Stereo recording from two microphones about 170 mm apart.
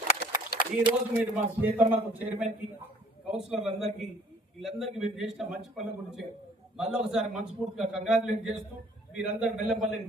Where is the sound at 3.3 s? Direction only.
5° right (ahead or behind).